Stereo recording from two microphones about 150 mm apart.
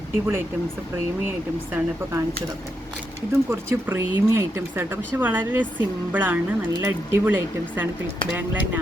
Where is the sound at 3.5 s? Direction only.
15° right (ahead or behind).